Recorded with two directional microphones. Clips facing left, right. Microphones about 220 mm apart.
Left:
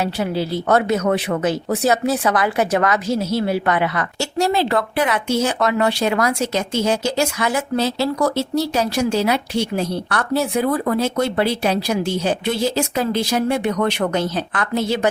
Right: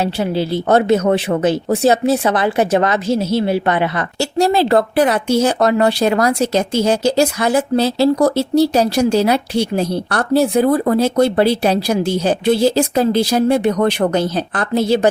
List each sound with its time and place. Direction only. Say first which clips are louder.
0.0 s speech: right 3 dB; 30° right (ahead or behind)